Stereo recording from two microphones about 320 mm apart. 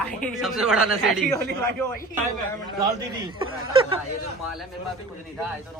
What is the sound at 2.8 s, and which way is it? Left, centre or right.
A man's voice, centre.